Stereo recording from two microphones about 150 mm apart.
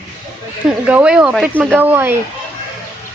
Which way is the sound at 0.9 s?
5° right (ahead or behind).